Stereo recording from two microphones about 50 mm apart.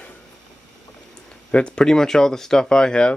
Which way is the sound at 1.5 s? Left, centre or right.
Left.